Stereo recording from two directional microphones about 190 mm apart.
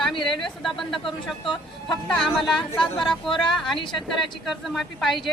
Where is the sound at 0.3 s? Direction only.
Centre (ahead or behind).